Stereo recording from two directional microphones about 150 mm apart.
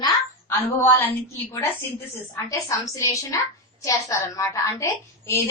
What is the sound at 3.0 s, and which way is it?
A woman's voice, 20° left (ahead or behind).